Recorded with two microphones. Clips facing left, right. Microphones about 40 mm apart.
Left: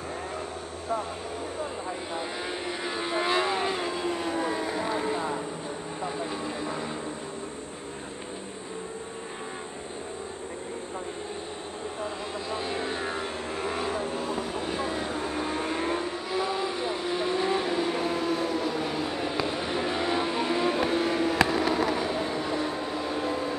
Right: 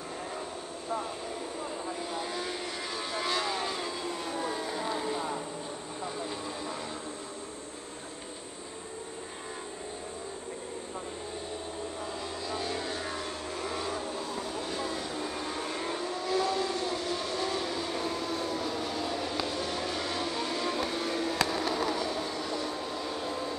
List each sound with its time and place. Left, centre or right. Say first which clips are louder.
2.1 s vehicle: left 2 dB; centre
12.4 s vehicle: left 3 dB; left